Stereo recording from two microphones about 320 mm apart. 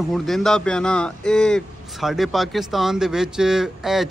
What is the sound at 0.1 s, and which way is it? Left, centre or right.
Speech, centre.